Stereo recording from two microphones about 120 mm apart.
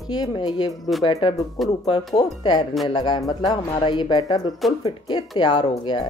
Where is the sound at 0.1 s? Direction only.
35° left (ahead or behind).